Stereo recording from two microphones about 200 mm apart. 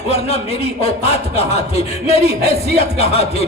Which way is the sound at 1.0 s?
30° left (ahead or behind).